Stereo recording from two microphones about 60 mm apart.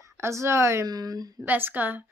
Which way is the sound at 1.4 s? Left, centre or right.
Right.